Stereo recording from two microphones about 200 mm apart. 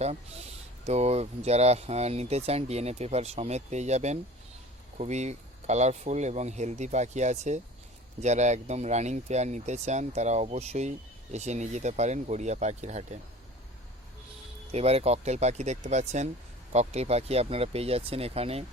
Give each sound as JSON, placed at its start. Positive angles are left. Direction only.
{"t": 0.0, "sound": "speech", "side_deg": -30}
{"t": 14.7, "sound": "speech", "side_deg": -30}